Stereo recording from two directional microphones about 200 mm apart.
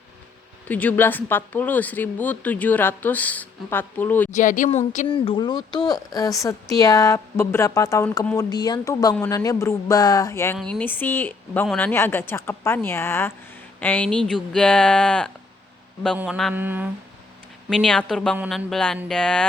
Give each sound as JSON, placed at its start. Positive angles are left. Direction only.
{"t": 0.7, "sound": "speech", "side_deg": 10}
{"t": 4.4, "sound": "speech", "side_deg": 40}
{"t": 5.1, "sound": "speech", "side_deg": 25}
{"t": 16.1, "sound": "mantra", "side_deg": -5}
{"t": 17.7, "sound": "speech", "side_deg": 5}